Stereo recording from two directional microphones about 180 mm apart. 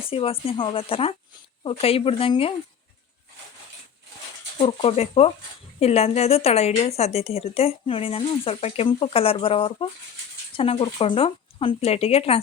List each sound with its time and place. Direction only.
0.0 s a woman's voice: 30° left (ahead or behind)
4.5 s a woman's voice: 30° left (ahead or behind)